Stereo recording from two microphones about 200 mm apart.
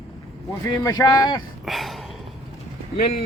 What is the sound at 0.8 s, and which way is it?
Speech, 20° left (ahead or behind).